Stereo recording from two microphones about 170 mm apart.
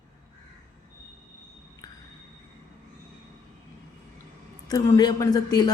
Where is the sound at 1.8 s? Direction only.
20° left (ahead or behind).